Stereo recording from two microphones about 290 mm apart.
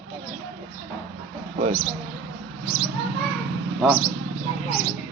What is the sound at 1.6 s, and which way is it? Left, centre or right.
Speech, centre.